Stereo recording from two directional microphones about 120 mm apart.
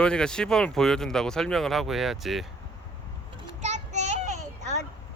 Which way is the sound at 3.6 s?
70° right (ahead or behind).